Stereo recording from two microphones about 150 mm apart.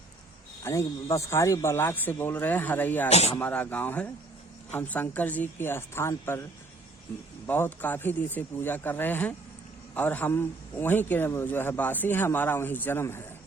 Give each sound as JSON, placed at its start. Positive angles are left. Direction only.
{"t": 0.6, "sound": "a man's voice", "side_deg": 20}
{"t": 3.1, "sound": "speech", "side_deg": 45}
{"t": 3.3, "sound": "a man's voice", "side_deg": 10}
{"t": 7.4, "sound": "a man's voice", "side_deg": 15}